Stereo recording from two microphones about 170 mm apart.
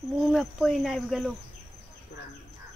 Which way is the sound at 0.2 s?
Centre (ahead or behind).